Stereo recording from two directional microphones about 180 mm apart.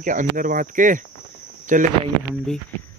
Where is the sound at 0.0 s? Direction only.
45° right (ahead or behind).